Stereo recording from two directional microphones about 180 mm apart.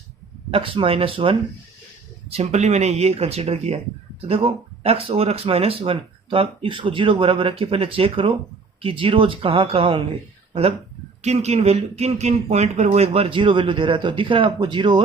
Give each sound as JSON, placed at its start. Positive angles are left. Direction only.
{"t": 0.5, "sound": "speech", "side_deg": -30}